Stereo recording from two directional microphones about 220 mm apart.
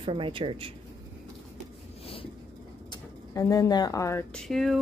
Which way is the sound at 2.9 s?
15° left (ahead or behind).